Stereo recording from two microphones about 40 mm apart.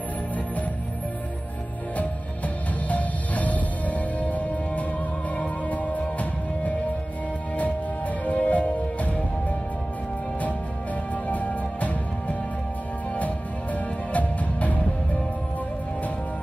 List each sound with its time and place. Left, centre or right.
2.0 s music: left
8.3 s music: left
11.2 s music: left